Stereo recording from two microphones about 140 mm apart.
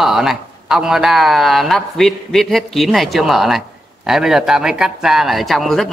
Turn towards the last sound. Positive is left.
turn(degrees=0)  # may be behind; listen again after turning